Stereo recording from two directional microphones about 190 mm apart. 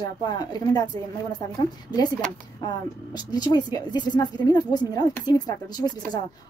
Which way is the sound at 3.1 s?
20° left (ahead or behind).